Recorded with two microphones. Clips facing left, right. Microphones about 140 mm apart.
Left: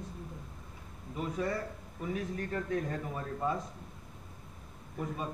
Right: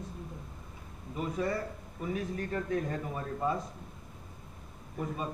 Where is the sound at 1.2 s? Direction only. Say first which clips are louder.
Right 2 dB; 15° right (ahead or behind).